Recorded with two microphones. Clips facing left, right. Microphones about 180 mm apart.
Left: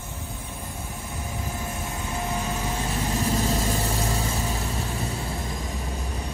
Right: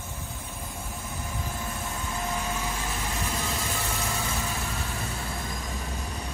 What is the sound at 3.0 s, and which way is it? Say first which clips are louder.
Vehicle: left 7 dB; 35° left (ahead or behind).